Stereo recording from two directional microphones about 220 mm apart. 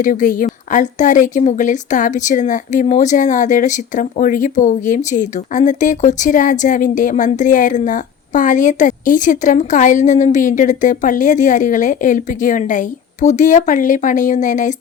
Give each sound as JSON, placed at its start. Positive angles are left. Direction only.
{"t": 0.0, "sound": "speech", "side_deg": 35}